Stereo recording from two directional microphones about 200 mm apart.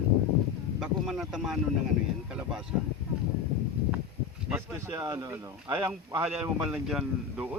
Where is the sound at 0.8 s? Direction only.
Centre (ahead or behind).